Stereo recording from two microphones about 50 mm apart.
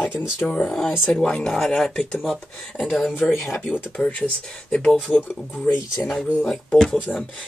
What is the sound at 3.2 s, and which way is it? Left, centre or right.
Speech, left.